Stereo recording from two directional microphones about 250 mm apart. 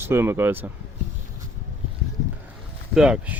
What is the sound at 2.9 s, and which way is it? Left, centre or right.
Speech, centre.